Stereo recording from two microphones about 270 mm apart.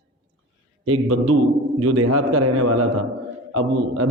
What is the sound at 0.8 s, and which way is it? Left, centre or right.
A man's voice, right.